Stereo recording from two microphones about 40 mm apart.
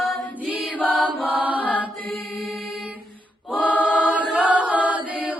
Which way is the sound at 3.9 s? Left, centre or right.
Right.